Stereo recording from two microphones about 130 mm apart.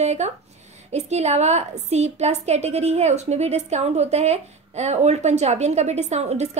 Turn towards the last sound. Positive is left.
turn(degrees=-55)  # may be behind; listen again after turning